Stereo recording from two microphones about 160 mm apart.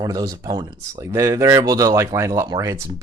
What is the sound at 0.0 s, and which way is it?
Speech, 20° right (ahead or behind).